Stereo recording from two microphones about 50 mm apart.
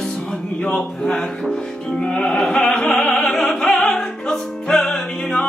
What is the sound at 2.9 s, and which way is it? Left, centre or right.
Music, centre.